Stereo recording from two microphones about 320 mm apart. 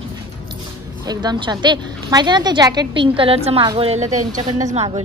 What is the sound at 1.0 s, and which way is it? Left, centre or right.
A woman's voice, centre.